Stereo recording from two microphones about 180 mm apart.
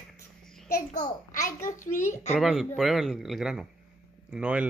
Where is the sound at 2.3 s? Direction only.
Centre (ahead or behind).